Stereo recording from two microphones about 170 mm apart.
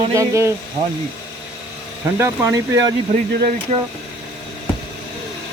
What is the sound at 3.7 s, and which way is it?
Speech, 40° right (ahead or behind).